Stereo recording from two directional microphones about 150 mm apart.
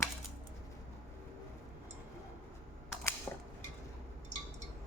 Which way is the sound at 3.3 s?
15° left (ahead or behind).